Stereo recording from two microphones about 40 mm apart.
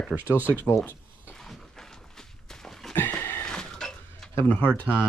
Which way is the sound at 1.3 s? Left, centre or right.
Centre.